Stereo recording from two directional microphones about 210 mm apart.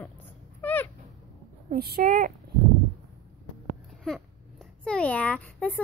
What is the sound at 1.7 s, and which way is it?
Speech, 45° right (ahead or behind).